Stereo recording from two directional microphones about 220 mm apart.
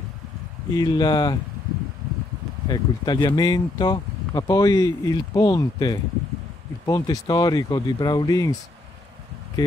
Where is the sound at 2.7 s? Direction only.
20° left (ahead or behind).